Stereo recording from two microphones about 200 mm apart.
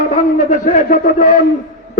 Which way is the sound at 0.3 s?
40° left (ahead or behind).